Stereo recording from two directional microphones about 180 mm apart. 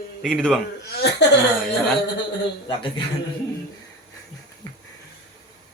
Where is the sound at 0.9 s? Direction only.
65° left (ahead or behind).